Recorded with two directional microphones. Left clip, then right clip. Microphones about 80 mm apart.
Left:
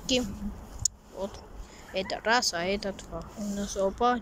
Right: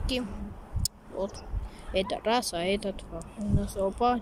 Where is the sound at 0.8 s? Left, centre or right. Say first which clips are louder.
Even; right.